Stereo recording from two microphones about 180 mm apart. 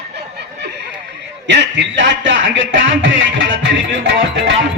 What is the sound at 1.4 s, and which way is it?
A man's voice, 85° right.